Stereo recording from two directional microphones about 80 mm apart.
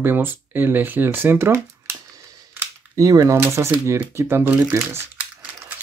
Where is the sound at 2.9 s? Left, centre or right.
Right.